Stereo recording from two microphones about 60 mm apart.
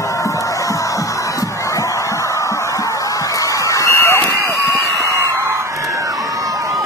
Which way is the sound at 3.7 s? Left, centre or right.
Left.